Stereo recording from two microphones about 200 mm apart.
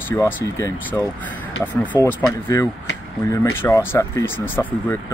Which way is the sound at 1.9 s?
15° left (ahead or behind).